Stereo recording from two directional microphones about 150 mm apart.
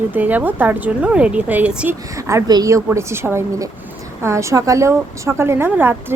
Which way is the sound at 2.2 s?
25° right (ahead or behind).